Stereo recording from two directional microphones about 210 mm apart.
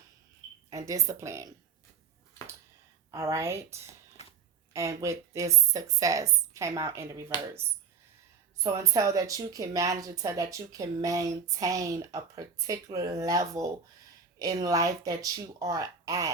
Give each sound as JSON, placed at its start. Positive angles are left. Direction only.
{"t": 0.7, "sound": "speech", "side_deg": -15}
{"t": 3.1, "sound": "speech", "side_deg": -15}
{"t": 4.2, "sound": "a sound", "side_deg": 30}
{"t": 4.7, "sound": "speech", "side_deg": -15}
{"t": 8.5, "sound": "speech", "side_deg": -15}